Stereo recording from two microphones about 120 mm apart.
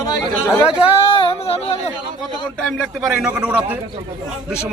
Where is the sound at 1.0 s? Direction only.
50° left (ahead or behind).